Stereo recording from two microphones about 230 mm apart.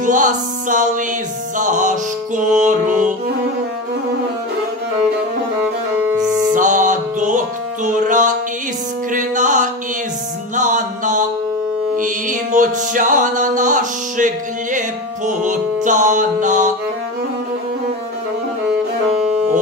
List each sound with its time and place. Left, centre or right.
0.0 s music: right
5.9 s music: centre
6.5 s music: right